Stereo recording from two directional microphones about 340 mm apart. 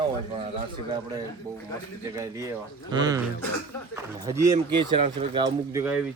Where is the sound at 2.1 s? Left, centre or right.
Centre.